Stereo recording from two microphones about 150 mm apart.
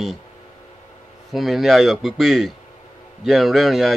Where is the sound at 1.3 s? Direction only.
Centre (ahead or behind).